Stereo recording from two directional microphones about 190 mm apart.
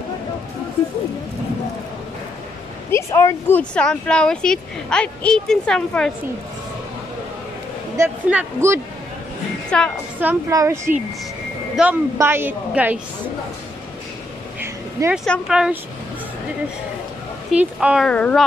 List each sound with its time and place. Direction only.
2.9 s speech: 15° left (ahead or behind)
8.0 s a woman's voice: 10° right (ahead or behind)
9.7 s speech: 5° left (ahead or behind)
10.2 s a woman's voice: 15° right (ahead or behind)
14.6 s a sound: 10° right (ahead or behind)
15.2 s speech: centre (ahead or behind)
17.5 s speech: 5° right (ahead or behind)